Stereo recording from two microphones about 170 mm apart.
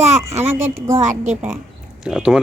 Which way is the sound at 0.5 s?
15° right (ahead or behind).